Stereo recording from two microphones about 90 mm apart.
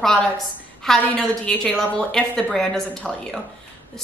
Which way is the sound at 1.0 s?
15° left (ahead or behind).